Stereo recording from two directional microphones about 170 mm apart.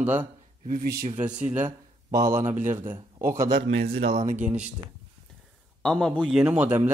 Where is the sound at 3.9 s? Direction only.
35° right (ahead or behind).